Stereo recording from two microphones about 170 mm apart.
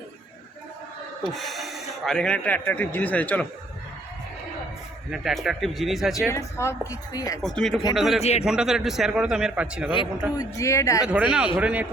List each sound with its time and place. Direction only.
1.3 s speech: centre (ahead or behind)
5.1 s a man's voice: centre (ahead or behind)
6.3 s a woman's voice: 15° left (ahead or behind)
7.4 s a man's voice: centre (ahead or behind)
8.2 s speech: 40° left (ahead or behind)
8.4 s a man's voice: 5° right (ahead or behind)
10.3 s a woman's voice: 15° left (ahead or behind)
11.1 s a man's voice: 5° right (ahead or behind)